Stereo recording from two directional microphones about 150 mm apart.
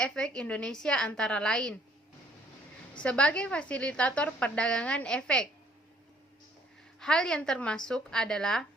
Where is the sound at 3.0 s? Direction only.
10° left (ahead or behind).